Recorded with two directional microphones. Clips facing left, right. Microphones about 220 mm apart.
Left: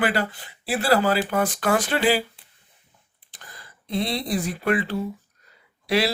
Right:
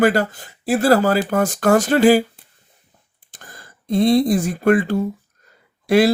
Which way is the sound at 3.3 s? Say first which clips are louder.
Right 4 dB; 45° right (ahead or behind).